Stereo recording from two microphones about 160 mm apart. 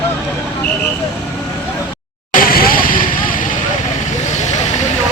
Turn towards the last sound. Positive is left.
turn(degrees=60)  # may be behind; listen again after turning